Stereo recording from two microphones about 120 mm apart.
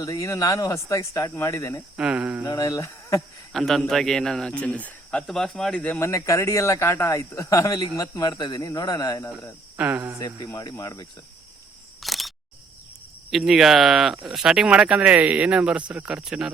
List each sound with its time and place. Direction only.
0.0 s speech: 25° left (ahead or behind)
2.0 s speech: 10° right (ahead or behind)
2.4 s speech: 30° left (ahead or behind)
3.5 s a man's voice: centre (ahead or behind)
6.0 s speech: 25° left (ahead or behind)
9.7 s speech: 15° right (ahead or behind)
10.2 s speech: 35° left (ahead or behind)
12.0 s camera: centre (ahead or behind)
13.3 s a man's voice: 5° right (ahead or behind)